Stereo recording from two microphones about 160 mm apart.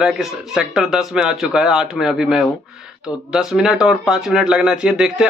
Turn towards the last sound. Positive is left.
turn(degrees=-5)  # may be behind; listen again after turning